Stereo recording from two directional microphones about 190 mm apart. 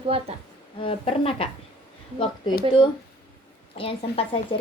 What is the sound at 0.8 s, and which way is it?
Speech, 30° left (ahead or behind).